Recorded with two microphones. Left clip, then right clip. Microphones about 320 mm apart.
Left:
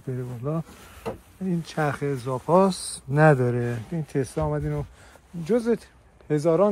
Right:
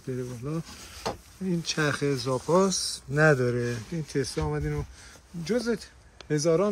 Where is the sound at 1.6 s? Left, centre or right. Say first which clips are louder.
Even; centre.